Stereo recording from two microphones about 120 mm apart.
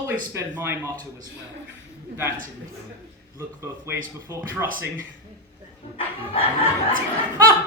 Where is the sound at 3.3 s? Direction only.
20° right (ahead or behind).